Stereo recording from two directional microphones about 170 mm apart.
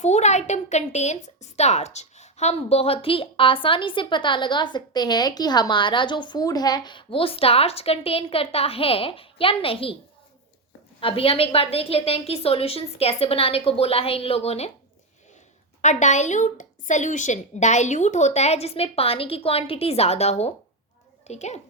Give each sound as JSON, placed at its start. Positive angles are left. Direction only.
{"t": 0.0, "sound": "a woman's voice", "side_deg": 40}
{"t": 11.0, "sound": "a woman's voice", "side_deg": 35}
{"t": 15.8, "sound": "a woman's voice", "side_deg": 45}